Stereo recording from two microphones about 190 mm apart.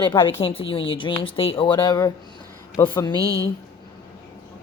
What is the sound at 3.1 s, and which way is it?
Speech, 20° right (ahead or behind).